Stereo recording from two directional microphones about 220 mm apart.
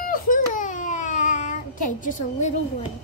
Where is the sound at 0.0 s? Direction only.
40° left (ahead or behind).